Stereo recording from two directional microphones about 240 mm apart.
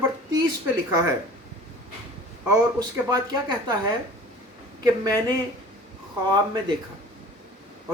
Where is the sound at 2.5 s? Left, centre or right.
Centre.